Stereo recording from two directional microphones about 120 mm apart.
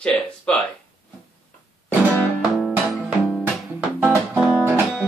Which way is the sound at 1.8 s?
15° left (ahead or behind).